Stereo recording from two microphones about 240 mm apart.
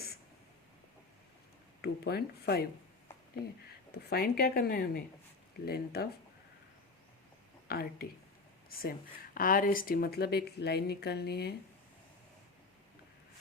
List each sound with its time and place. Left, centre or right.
1.8 s speech: left
3.9 s speech: left
7.7 s speech: left